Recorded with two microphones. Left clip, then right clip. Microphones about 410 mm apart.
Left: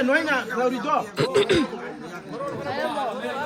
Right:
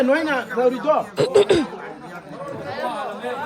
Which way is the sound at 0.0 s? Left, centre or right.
Right.